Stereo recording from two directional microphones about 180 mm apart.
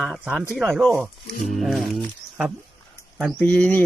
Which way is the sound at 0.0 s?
Centre (ahead or behind).